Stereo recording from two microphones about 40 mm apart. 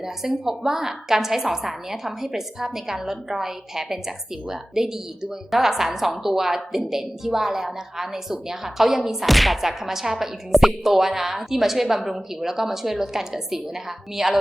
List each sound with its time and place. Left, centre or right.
0.0 s a woman's voice: centre